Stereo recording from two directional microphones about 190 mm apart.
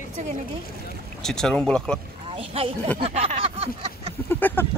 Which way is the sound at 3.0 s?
35° right (ahead or behind).